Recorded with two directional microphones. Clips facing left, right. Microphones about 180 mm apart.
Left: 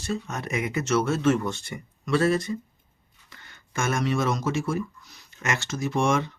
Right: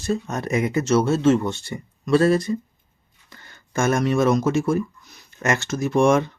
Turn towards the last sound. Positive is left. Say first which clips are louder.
# right 7 dB
turn(degrees=-50)  # may be behind; listen again after turning